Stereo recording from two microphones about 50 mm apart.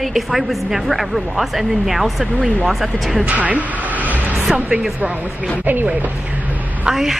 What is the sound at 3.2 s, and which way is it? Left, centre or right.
Speech, right.